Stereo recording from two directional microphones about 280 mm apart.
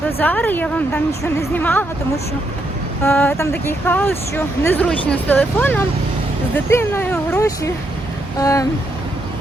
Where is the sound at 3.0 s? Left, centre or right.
Centre.